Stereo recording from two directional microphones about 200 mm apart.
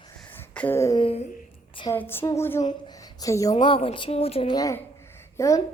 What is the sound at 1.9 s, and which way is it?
A woman's voice, 10° left (ahead or behind).